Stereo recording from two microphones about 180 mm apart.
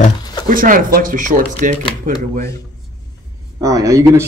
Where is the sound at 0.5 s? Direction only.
50° right (ahead or behind).